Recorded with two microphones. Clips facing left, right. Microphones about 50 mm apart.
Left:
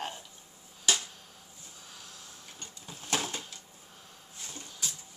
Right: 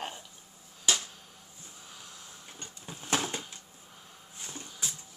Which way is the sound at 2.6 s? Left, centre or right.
Right.